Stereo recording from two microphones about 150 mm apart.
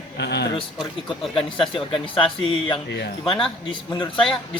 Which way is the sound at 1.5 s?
35° left (ahead or behind).